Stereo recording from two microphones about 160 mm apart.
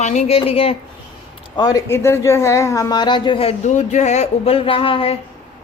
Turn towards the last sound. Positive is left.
turn(degrees=35)  # may be behind; listen again after turning